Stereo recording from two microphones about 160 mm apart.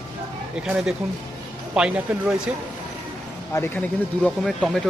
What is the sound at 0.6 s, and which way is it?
Speech, 5° right (ahead or behind).